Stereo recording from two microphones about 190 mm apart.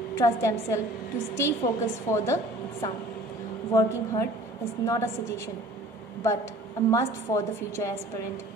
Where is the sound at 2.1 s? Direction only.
15° left (ahead or behind).